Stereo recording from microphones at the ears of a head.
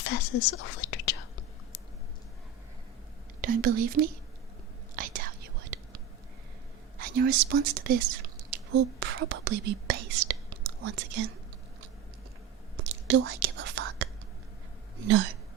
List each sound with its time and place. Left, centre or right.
0.0 s whispering: left
3.4 s speech: right
4.9 s whispering: right
7.0 s speech: right
12.7 s whispering: right
14.9 s speech: right